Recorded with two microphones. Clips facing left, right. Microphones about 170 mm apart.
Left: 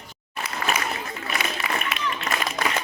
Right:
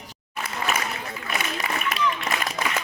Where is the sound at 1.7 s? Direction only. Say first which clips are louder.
Left 3 dB; 45° right (ahead or behind).